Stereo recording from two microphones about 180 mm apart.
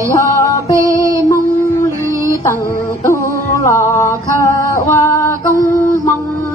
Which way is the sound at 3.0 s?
15° left (ahead or behind).